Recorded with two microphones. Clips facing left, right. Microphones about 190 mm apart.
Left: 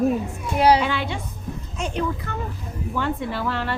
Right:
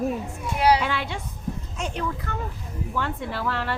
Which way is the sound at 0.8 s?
Centre (ahead or behind).